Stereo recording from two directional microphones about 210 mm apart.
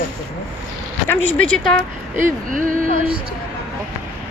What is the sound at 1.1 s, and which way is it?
Speech, 5° left (ahead or behind).